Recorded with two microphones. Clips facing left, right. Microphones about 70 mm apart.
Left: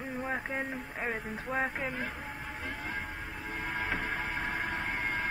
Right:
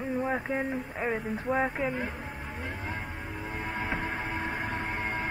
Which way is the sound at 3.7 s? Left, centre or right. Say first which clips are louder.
Right 1 dB; right.